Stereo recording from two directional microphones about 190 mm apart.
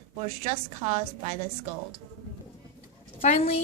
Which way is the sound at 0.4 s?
35° right (ahead or behind).